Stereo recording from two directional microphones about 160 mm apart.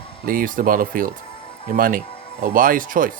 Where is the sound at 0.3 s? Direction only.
60° right (ahead or behind).